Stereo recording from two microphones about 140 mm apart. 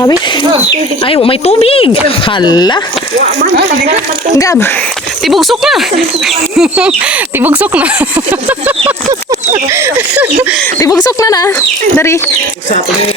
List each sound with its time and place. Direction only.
1.0 s speech: 40° left (ahead or behind)
5.2 s speech: centre (ahead or behind)
9.7 s speech: 20° right (ahead or behind)
10.8 s speech: 25° left (ahead or behind)